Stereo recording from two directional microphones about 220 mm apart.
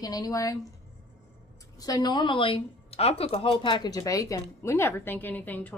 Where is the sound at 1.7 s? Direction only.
15° left (ahead or behind).